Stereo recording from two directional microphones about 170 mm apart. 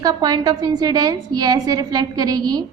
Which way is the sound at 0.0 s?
20° right (ahead or behind).